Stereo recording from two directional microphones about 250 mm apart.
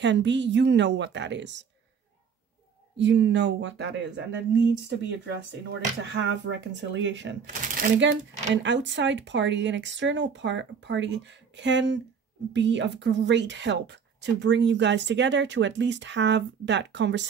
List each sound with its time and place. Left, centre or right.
0.0 s a woman's voice: right
3.0 s a woman's voice: right
7.4 s speech: right
8.6 s a woman's voice: right